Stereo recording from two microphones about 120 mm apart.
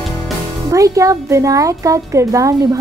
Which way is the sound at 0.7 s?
25° right (ahead or behind).